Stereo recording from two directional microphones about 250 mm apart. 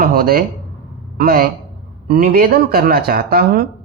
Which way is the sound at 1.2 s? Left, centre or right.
Right.